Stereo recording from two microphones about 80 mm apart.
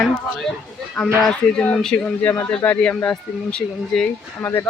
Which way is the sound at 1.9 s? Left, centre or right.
Centre.